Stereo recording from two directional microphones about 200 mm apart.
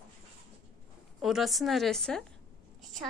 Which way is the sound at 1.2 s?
Centre (ahead or behind).